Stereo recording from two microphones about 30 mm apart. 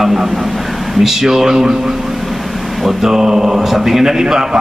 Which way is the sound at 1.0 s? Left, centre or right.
Centre.